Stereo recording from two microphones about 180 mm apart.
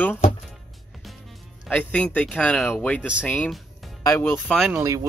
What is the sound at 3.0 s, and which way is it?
Speech, 5° right (ahead or behind).